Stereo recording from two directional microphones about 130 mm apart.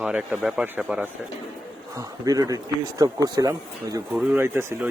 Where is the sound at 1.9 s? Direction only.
30° right (ahead or behind).